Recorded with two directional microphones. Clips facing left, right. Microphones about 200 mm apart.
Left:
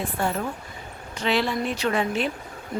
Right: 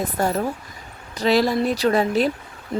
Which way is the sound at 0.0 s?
40° right (ahead or behind).